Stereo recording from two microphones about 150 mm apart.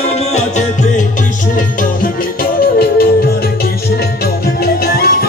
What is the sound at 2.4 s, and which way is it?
Music, 90° left.